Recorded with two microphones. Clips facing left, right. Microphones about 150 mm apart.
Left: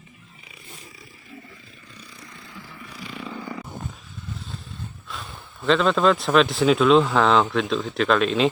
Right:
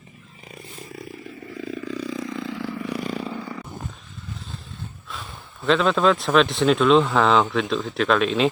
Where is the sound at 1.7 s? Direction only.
90° right.